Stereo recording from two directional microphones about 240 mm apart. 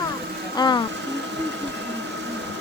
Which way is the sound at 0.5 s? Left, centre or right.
Centre.